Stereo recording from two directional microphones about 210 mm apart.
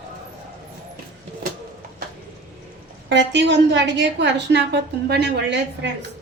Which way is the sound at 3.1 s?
55° right (ahead or behind).